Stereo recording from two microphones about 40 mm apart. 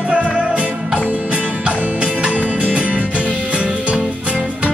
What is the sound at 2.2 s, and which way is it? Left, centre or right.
Music, right.